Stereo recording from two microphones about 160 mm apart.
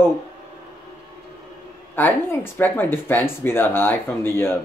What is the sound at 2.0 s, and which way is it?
Speech, 15° left (ahead or behind).